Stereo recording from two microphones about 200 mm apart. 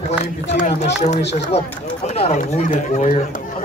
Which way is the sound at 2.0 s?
35° left (ahead or behind).